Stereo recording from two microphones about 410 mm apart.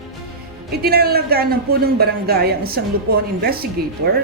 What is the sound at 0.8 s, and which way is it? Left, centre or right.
A woman's voice, right.